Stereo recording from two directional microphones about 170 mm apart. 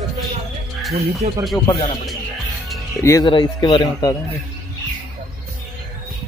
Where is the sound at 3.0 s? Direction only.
15° left (ahead or behind).